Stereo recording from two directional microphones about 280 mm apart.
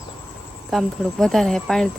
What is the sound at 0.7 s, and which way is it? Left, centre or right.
Speech, centre.